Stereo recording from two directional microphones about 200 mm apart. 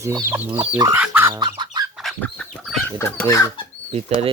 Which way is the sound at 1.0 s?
10° right (ahead or behind).